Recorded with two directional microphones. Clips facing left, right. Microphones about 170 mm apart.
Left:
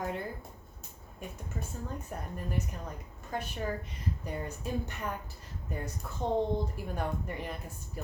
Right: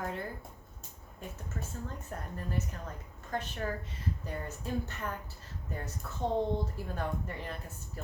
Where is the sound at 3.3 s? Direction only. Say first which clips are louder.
Left 1 dB; 10° left (ahead or behind).